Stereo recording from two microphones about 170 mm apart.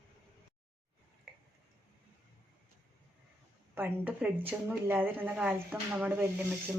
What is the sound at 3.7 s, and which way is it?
Speech, 10° right (ahead or behind).